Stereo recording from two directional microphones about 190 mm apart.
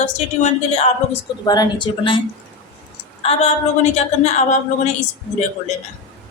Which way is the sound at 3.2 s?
35° left (ahead or behind).